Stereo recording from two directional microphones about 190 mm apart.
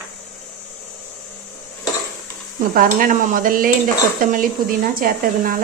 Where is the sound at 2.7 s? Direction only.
45° right (ahead or behind).